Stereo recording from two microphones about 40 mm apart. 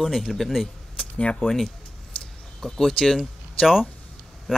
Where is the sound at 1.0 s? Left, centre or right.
Left.